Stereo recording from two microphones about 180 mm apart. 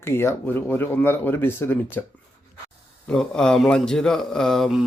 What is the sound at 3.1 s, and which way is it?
Speech, 5° left (ahead or behind).